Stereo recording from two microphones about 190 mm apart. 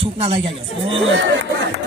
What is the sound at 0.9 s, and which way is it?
Speech, 90° right.